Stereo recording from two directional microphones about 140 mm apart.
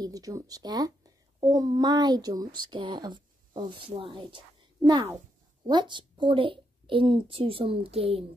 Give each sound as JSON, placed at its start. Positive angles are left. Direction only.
{"t": 0.0, "sound": "a child's voice", "side_deg": -25}